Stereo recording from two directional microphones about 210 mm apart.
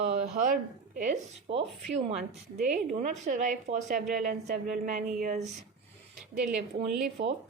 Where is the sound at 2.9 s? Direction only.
40° right (ahead or behind).